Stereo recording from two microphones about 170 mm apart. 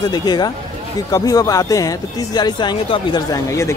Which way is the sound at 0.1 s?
25° left (ahead or behind).